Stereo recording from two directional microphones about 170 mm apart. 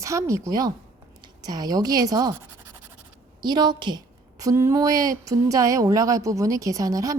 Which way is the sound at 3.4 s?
25° right (ahead or behind).